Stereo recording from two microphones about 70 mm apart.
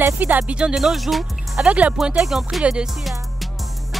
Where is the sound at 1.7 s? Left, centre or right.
Centre.